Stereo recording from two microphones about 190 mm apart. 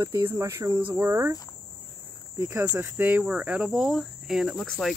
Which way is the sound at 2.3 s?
10° right (ahead or behind).